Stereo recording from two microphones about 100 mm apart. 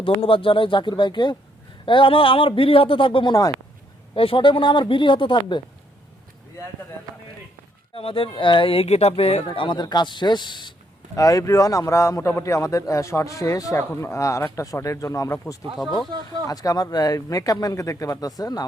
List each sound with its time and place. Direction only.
0.0 s a man's voice: 60° left (ahead or behind)
7.9 s speech: 65° left (ahead or behind); by 9.4 s 85° left
9.5 s speech: 50° left (ahead or behind)
11.1 s a man's voice: 35° left (ahead or behind)